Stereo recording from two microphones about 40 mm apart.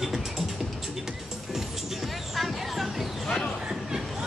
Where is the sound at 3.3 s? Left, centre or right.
Centre.